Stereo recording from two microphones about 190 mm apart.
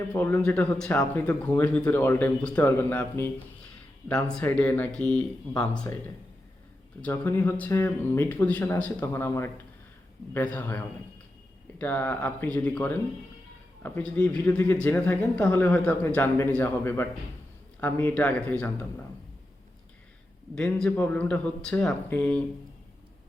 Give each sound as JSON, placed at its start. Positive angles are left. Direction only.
{"t": 0.1, "sound": "speech", "side_deg": 10}
{"t": 7.0, "sound": "speech", "side_deg": 10}
{"t": 20.6, "sound": "speech", "side_deg": 5}